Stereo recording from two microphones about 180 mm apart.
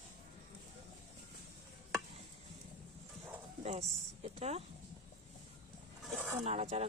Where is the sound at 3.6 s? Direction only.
40° right (ahead or behind).